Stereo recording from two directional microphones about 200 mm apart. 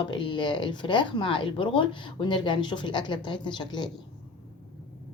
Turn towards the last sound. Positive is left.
turn(degrees=20)  # may be behind; listen again after turning